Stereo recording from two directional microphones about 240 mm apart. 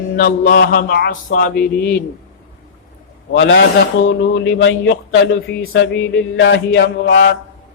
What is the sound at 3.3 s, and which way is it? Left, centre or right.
A man's voice, left.